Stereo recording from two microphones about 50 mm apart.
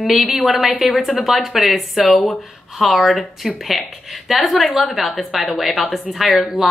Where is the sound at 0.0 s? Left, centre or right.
Centre.